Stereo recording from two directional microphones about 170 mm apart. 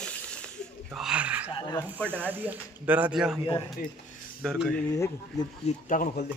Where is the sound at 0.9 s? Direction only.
5° right (ahead or behind).